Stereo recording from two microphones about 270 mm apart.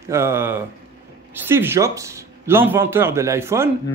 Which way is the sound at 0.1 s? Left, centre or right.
Centre.